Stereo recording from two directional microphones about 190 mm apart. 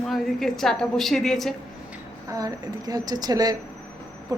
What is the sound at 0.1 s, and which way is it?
A woman's voice, centre (ahead or behind).